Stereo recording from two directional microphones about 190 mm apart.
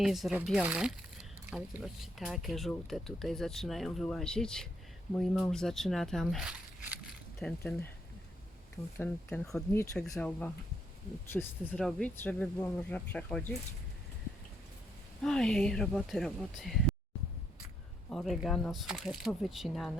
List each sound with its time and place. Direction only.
0.0 s speech: centre (ahead or behind)
9.0 s speech: 10° left (ahead or behind)
15.2 s speech: 5° left (ahead or behind)
18.1 s speech: centre (ahead or behind)